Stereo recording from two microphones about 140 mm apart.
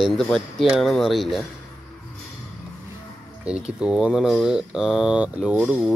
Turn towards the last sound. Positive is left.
turn(degrees=-5)  # may be behind; listen again after turning